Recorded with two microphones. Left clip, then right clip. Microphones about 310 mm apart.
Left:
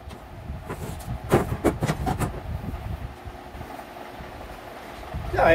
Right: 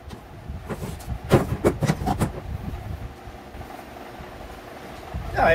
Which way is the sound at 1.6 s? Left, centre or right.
Centre.